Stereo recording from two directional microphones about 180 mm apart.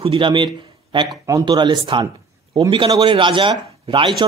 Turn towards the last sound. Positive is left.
turn(degrees=-25)  # may be behind; listen again after turning